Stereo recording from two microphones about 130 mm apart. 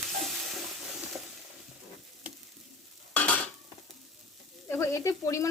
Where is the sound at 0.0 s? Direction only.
Centre (ahead or behind).